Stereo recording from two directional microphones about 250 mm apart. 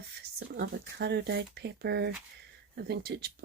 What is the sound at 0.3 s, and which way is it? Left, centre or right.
Speech, right.